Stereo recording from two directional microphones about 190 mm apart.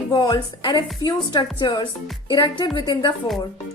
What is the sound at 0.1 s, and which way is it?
A woman's voice, 20° left (ahead or behind).